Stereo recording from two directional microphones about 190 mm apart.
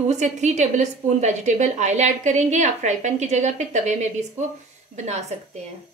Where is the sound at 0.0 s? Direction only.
35° right (ahead or behind).